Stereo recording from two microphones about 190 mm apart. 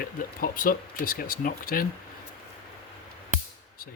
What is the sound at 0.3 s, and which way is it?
Speech, 50° left (ahead or behind).